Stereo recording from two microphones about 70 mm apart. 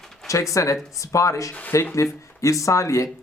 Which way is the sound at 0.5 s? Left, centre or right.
Left.